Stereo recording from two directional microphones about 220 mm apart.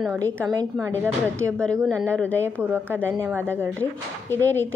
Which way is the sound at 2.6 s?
10° right (ahead or behind).